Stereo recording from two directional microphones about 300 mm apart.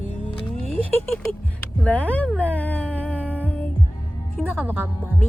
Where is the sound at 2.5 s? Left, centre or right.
Centre.